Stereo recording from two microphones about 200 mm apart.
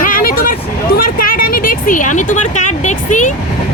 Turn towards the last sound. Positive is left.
turn(degrees=40)  # may be behind; listen again after turning